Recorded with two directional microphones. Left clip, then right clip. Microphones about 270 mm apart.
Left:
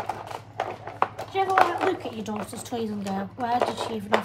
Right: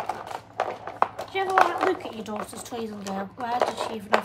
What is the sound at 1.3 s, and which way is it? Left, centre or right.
Speech, centre.